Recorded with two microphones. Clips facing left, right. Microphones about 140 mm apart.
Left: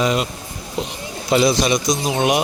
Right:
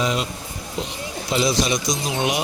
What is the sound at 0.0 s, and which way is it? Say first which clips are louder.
Speech: left 4 dB; 60° left (ahead or behind).